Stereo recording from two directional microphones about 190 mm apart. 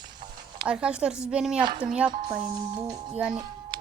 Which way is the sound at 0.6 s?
5° right (ahead or behind).